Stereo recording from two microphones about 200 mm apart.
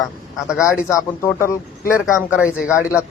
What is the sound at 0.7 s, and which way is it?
Speech, 10° left (ahead or behind).